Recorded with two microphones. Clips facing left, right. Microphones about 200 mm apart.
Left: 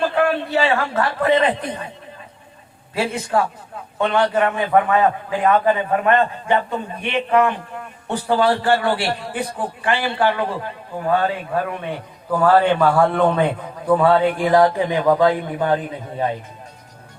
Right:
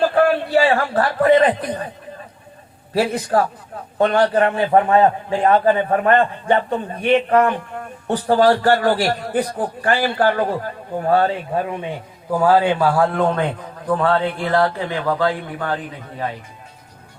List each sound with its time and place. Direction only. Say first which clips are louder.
0.1 s speech: right 3 dB; 35° right (ahead or behind)
2.9 s a man's voice: right 3 dB; 35° right (ahead or behind)
12.4 s a man's voice: even; 10° right (ahead or behind)
14.0 s a man's voice: left 3 dB; 10° left (ahead or behind)